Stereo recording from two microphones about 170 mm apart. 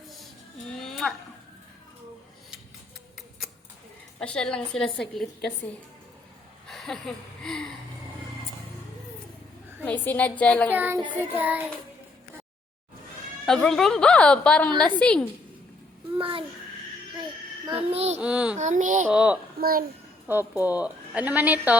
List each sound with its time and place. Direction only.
0.8 s a sound: centre (ahead or behind)
4.2 s a woman's voice: 5° left (ahead or behind)
6.7 s a sound: centre (ahead or behind)
7.4 s a woman's voice: 5° left (ahead or behind)
9.8 s a woman's voice: 10° left (ahead or behind)
10.7 s speech: 10° right (ahead or behind)
13.4 s a woman's voice: 5° left (ahead or behind)
16.1 s a child's voice: 30° right (ahead or behind)
17.9 s a child's voice: 40° right (ahead or behind)
18.2 s speech: 5° right (ahead or behind)
18.5 s a sound: 45° right (ahead or behind)
19.1 s speech: 5° right (ahead or behind)
19.5 s a child's voice: 60° right (ahead or behind)
20.5 s speech: 10° right (ahead or behind)